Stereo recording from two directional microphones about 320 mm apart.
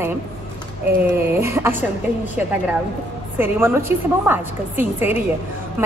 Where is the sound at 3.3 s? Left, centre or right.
Centre.